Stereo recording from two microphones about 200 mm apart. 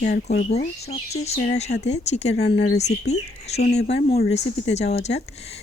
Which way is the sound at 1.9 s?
35° left (ahead or behind).